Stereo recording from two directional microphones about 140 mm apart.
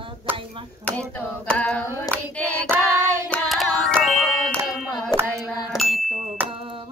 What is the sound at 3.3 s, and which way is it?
Music, 5° left (ahead or behind).